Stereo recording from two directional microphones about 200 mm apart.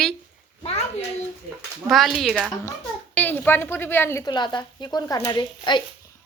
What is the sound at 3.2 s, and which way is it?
A woman's voice, 10° left (ahead or behind).